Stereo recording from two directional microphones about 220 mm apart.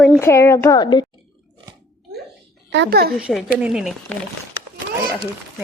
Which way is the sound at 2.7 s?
50° right (ahead or behind).